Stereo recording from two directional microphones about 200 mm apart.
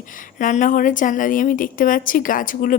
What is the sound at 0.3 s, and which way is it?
A woman's voice, 40° left (ahead or behind).